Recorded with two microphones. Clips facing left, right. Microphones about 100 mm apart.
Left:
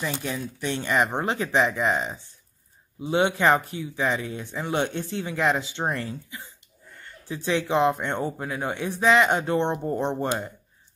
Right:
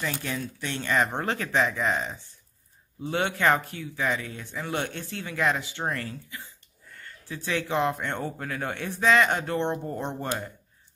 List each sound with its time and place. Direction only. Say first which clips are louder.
0.0 s speech: left 2 dB; 15° left (ahead or behind)